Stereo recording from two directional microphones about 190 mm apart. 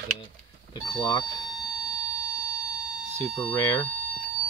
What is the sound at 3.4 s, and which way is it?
Speech, 10° left (ahead or behind).